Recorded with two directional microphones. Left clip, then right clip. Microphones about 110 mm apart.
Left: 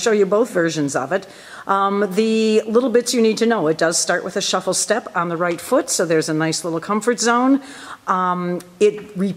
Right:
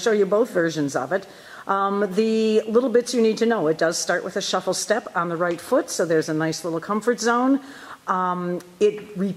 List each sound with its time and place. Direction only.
0.0 s speech: 10° left (ahead or behind)